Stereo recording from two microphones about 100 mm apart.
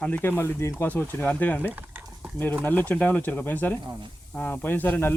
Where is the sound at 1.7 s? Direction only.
15° right (ahead or behind).